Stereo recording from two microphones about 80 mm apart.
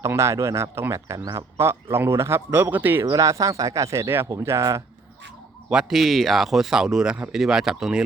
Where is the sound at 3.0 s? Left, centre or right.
Right.